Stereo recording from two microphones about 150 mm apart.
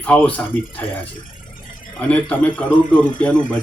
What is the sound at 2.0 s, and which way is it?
Speech, 10° left (ahead or behind).